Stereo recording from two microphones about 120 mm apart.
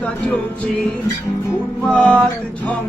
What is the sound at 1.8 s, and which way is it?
Speech, 10° left (ahead or behind).